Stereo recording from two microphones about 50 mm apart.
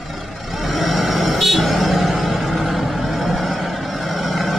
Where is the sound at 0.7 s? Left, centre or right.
Centre.